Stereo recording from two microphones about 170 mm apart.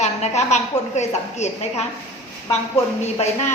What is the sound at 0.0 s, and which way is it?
A woman's voice, 40° left (ahead or behind).